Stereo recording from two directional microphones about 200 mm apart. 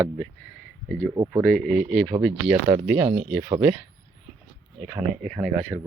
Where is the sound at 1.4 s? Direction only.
5° left (ahead or behind).